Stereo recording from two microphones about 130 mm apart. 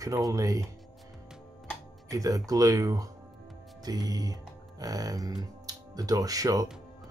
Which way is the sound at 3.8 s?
30° right (ahead or behind).